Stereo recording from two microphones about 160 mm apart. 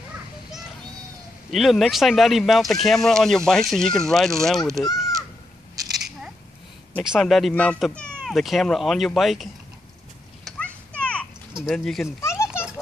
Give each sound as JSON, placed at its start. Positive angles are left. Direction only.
{"t": 1.5, "sound": "speech", "side_deg": 0}
{"t": 5.9, "sound": "a sound", "side_deg": 0}
{"t": 7.0, "sound": "speech", "side_deg": 0}
{"t": 10.4, "sound": "a sound", "side_deg": 10}
{"t": 11.6, "sound": "speech", "side_deg": 5}
{"t": 12.2, "sound": "children playing", "side_deg": 15}